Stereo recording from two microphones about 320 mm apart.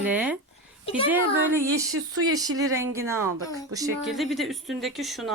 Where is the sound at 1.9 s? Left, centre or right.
Right.